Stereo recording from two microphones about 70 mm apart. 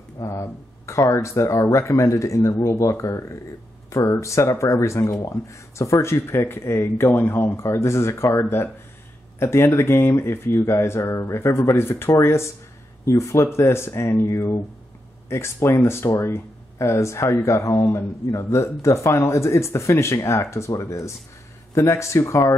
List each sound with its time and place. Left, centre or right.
0.2 s speech: left